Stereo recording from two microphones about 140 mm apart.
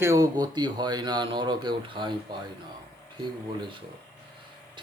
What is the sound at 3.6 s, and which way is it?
Speech, 35° right (ahead or behind).